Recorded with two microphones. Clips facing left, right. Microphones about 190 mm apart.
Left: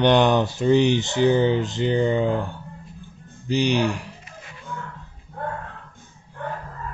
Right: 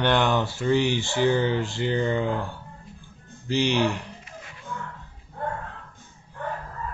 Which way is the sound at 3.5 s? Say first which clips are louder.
Left 2 dB; 15° left (ahead or behind).